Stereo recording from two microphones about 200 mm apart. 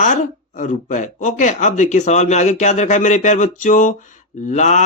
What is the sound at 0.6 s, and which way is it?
Speech, 40° left (ahead or behind).